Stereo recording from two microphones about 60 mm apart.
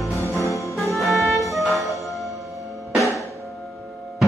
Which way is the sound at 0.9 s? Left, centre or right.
Centre.